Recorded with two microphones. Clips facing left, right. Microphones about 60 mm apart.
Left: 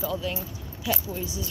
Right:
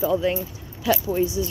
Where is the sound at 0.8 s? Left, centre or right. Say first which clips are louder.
Right 9 dB; right.